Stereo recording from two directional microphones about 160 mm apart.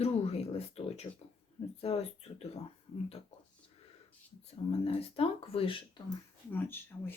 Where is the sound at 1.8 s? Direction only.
40° left (ahead or behind).